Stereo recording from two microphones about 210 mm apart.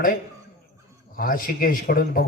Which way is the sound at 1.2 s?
40° left (ahead or behind).